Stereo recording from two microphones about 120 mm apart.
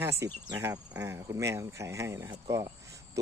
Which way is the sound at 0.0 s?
25° right (ahead or behind).